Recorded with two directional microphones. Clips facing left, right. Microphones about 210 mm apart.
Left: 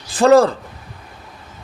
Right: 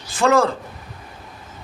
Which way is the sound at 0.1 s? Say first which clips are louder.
Left 6 dB; 35° left (ahead or behind).